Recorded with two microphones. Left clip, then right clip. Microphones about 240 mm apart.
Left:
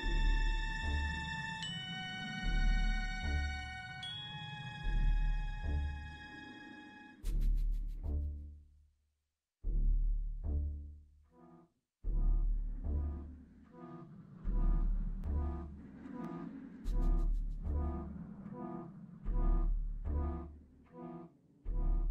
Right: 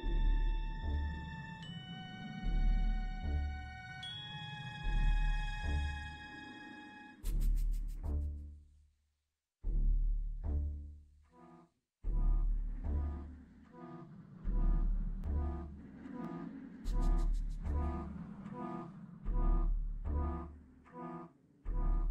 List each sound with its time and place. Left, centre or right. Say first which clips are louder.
0.0 s music: left 7 dB; left
3.8 s chime: left 1 dB; centre
4.8 s music: right 3 dB; centre; by 6.0 s right
6.0 s music: right 1 dB; centre; by 8.3 s right
10.4 s music: right 1 dB; right
11.3 s music: right 2 dB; right
12.9 s music: right 1 dB; right
19.1 s music: right 1 dB; centre; by 22.0 s right